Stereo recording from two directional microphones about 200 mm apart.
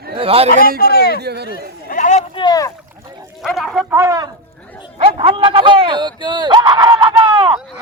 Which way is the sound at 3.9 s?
15° right (ahead or behind).